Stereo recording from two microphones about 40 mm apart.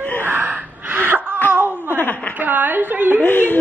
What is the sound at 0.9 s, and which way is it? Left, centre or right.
Wail, right.